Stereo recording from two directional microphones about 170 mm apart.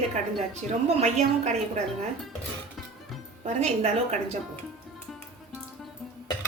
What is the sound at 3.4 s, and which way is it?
Speech, 40° right (ahead or behind).